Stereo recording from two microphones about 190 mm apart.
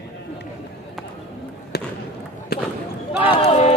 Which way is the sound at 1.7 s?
60° left (ahead or behind).